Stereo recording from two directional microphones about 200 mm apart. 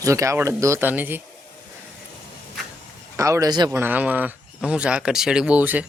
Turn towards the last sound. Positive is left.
turn(degrees=-10)  # may be behind; listen again after turning